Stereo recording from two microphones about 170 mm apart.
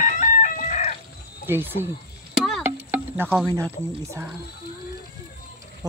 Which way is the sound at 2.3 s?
Centre (ahead or behind).